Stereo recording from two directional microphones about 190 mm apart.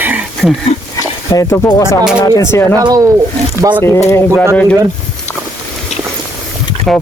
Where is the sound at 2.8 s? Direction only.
20° right (ahead or behind).